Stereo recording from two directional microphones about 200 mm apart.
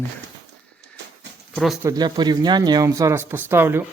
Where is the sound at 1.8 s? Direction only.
20° right (ahead or behind).